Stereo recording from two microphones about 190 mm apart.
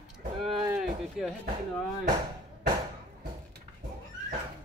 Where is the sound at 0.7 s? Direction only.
Centre (ahead or behind).